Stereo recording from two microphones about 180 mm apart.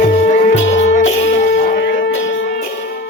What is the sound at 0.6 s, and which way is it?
Music, 90° left.